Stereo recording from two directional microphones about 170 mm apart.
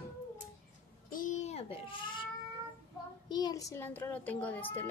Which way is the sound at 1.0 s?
55° left (ahead or behind).